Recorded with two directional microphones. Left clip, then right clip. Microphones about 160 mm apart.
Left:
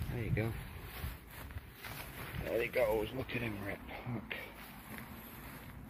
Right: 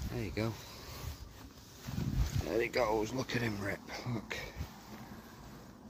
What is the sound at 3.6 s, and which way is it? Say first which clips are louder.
Speech: right 4 dB; 45° right (ahead or behind).